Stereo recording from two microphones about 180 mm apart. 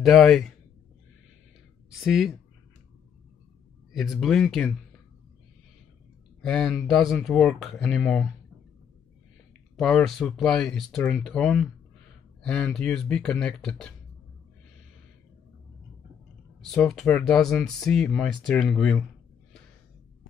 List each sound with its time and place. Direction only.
0.0 s speech: centre (ahead or behind)
1.9 s speech: centre (ahead or behind)
3.9 s speech: centre (ahead or behind)
6.4 s speech: 5° left (ahead or behind)
9.8 s speech: 5° left (ahead or behind)
16.6 s speech: 5° left (ahead or behind)